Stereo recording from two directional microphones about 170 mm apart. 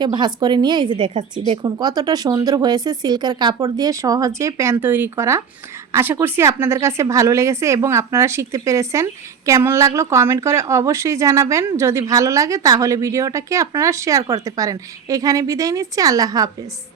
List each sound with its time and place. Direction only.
0.0 s a woman's voice: 25° right (ahead or behind)